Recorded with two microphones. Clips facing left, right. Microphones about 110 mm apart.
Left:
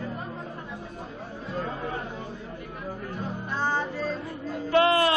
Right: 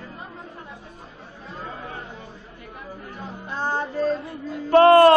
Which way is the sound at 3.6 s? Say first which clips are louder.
Right 5 dB; 45° right (ahead or behind).